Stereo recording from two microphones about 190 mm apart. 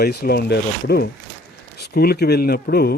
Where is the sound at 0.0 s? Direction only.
55° left (ahead or behind).